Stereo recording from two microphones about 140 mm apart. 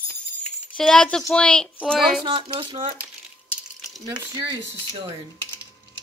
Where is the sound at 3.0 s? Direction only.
5° right (ahead or behind).